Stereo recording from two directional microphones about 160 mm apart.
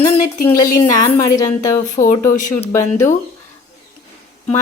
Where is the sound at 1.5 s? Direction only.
50° left (ahead or behind).